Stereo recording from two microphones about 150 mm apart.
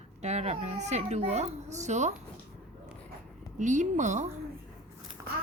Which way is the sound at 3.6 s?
55° right (ahead or behind).